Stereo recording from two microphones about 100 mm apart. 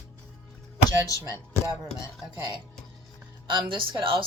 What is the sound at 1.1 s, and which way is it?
Speech, 35° left (ahead or behind).